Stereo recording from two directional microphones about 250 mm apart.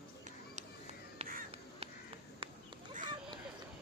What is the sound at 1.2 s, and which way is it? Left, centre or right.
Crow, right.